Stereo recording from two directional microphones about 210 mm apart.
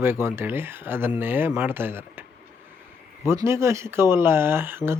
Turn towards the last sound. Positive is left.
turn(degrees=-10)  # may be behind; listen again after turning